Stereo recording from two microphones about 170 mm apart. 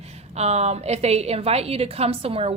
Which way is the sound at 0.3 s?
40° right (ahead or behind).